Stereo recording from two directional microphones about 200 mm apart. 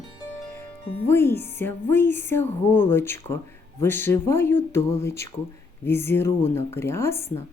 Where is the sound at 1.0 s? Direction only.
10° left (ahead or behind).